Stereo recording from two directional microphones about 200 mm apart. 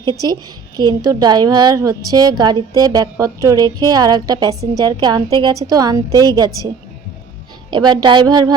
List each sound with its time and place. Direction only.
0.8 s a woman's voice: 20° right (ahead or behind)
7.7 s a woman's voice: 20° right (ahead or behind)